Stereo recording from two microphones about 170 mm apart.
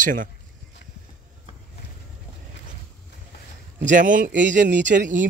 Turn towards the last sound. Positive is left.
turn(degrees=-50)  # may be behind; listen again after turning